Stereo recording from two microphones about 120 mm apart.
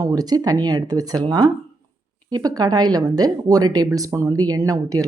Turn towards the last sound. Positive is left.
turn(degrees=-30)  # may be behind; listen again after turning